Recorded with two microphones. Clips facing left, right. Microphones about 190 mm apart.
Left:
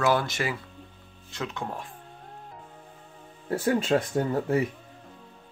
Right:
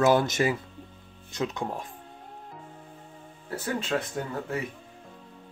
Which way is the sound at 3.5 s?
30° left (ahead or behind).